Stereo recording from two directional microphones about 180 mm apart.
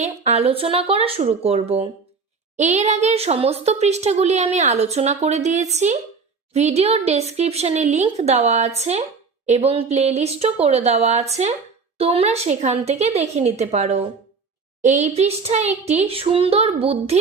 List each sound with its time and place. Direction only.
0.0 s speech: 35° right (ahead or behind)